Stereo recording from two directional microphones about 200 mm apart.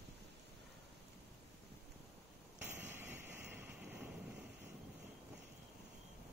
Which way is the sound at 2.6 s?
10° right (ahead or behind).